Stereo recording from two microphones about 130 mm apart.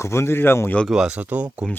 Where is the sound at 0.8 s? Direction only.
5° right (ahead or behind).